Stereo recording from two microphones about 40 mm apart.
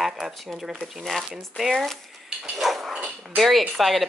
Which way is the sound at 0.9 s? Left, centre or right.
Centre.